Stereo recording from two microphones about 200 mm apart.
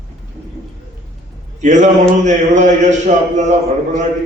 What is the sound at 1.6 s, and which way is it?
A man's voice, 35° right (ahead or behind).